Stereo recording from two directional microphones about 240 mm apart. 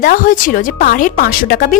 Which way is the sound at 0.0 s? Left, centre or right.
Left.